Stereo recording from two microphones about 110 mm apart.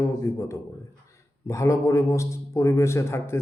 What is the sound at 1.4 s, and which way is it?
A man's voice, 30° left (ahead or behind).